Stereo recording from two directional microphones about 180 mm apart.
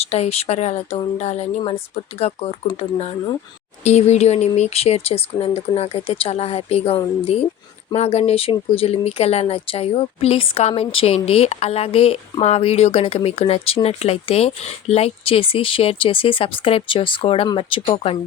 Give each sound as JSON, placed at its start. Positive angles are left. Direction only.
{"t": 0.0, "sound": "speech", "side_deg": 35}